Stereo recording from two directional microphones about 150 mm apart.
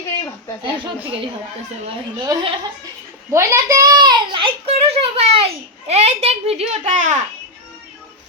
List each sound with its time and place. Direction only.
2.1 s speech: 35° right (ahead or behind)
3.3 s a child's voice: 20° right (ahead or behind); by 7.3 s 55° right (ahead or behind)